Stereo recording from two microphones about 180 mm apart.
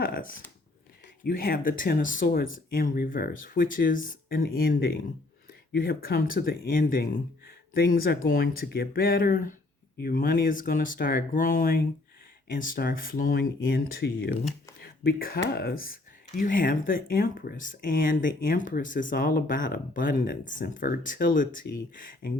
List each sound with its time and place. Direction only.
1.2 s speech: 55° left (ahead or behind)
14.8 s a sound: 55° left (ahead or behind)
15.5 s speech: 55° left (ahead or behind)